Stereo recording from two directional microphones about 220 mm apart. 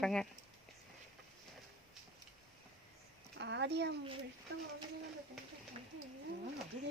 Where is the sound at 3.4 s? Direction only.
50° right (ahead or behind).